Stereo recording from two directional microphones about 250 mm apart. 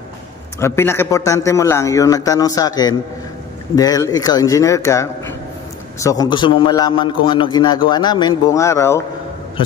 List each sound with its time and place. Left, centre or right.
0.6 s a man's voice: centre